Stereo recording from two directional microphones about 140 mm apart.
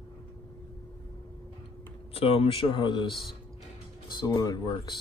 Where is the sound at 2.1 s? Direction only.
45° left (ahead or behind).